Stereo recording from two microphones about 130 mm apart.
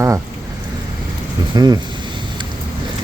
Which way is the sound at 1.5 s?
30° right (ahead or behind).